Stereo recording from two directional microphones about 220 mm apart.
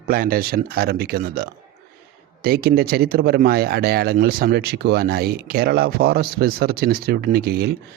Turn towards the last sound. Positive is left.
turn(degrees=-45)  # may be behind; listen again after turning